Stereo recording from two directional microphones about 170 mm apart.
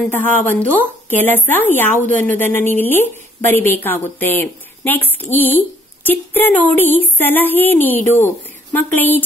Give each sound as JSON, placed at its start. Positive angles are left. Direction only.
{"t": 0.1, "sound": "a woman's voice", "side_deg": 10}